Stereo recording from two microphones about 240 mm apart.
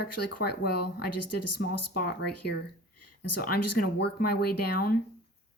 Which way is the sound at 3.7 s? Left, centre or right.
Left.